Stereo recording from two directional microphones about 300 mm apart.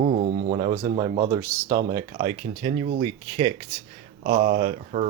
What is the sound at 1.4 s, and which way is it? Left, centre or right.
Speech, centre.